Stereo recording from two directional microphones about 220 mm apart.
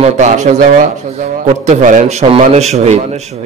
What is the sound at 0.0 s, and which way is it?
Speech, 35° right (ahead or behind).